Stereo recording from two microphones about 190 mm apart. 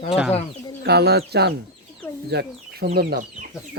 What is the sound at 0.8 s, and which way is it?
Speech, 60° right (ahead or behind).